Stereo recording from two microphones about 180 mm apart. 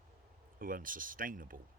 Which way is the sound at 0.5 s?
50° right (ahead or behind).